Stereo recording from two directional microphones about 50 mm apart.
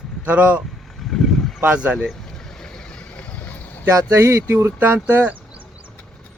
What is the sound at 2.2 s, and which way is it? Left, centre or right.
Vehicle, centre.